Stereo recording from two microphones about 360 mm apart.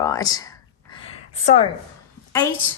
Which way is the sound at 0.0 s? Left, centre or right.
Centre.